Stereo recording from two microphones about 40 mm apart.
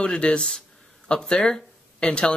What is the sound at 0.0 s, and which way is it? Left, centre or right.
Speech, left.